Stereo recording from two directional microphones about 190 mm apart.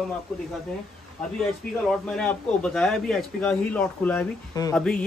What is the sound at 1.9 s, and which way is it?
A man's voice, 5° left (ahead or behind).